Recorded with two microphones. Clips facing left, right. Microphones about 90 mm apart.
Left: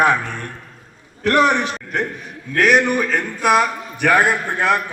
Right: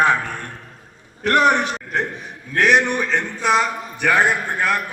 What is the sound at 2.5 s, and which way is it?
A man's voice, centre (ahead or behind).